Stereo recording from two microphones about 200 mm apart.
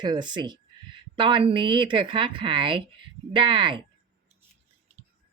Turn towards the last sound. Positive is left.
turn(degrees=-25)  # may be behind; listen again after turning